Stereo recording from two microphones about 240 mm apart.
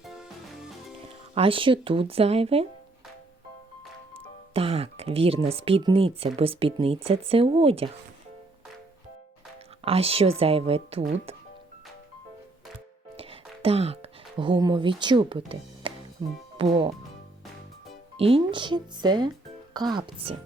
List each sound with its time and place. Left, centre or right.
0.0 s music: centre
1.4 s speech: right
4.5 s speech: right
9.8 s speech: right
13.1 s music: right
16.6 s speech: right
18.2 s speech: right